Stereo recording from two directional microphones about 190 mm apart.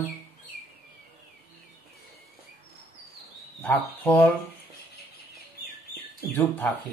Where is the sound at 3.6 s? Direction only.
10° left (ahead or behind).